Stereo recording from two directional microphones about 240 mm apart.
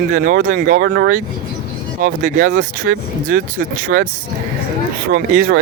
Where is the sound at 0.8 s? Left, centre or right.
Right.